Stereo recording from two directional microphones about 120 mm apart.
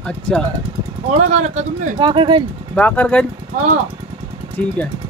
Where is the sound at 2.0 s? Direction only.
45° right (ahead or behind).